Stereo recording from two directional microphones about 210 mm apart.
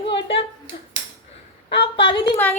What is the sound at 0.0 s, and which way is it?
Clapping, 25° left (ahead or behind).